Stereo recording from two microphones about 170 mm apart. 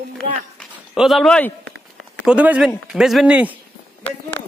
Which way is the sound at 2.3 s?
5° right (ahead or behind).